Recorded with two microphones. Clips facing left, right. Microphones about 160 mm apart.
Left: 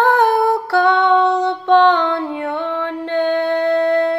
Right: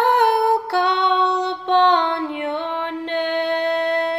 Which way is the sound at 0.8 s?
20° right (ahead or behind).